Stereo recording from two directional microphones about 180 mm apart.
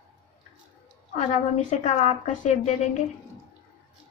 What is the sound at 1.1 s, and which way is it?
A woman's voice, 40° left (ahead or behind).